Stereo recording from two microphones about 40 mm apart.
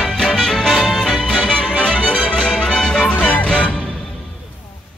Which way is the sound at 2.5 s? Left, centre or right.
Centre.